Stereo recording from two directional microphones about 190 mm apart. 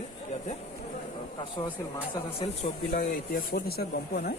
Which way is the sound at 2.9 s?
50° left (ahead or behind).